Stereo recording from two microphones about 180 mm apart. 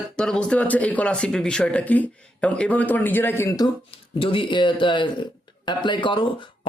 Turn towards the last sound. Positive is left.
turn(degrees=30)  # may be behind; listen again after turning